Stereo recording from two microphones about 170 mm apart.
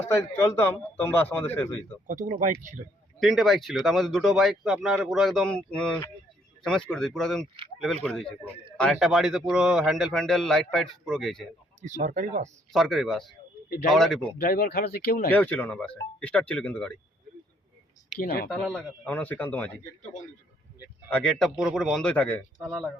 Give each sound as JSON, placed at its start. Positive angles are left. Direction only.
{"t": 0.0, "sound": "a man's voice", "side_deg": 15}
{"t": 2.0, "sound": "speech", "side_deg": -50}
{"t": 3.2, "sound": "a man's voice", "side_deg": 0}
{"t": 11.8, "sound": "speech", "side_deg": -45}
{"t": 12.7, "sound": "a man's voice", "side_deg": 0}
{"t": 14.3, "sound": "speech", "side_deg": 65}
{"t": 15.3, "sound": "a man's voice", "side_deg": 10}
{"t": 18.2, "sound": "speech", "side_deg": 60}
{"t": 18.6, "sound": "a man's voice", "side_deg": 5}
{"t": 21.1, "sound": "a man's voice", "side_deg": 5}